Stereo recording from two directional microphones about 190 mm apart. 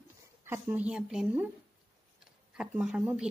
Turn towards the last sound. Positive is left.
turn(degrees=-5)  # may be behind; listen again after turning